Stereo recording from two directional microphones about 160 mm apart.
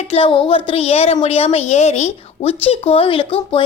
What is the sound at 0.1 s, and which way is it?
A woman's voice, 35° left (ahead or behind).